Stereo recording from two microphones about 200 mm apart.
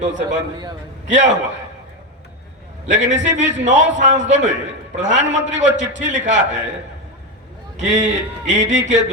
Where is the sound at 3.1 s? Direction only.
35° right (ahead or behind).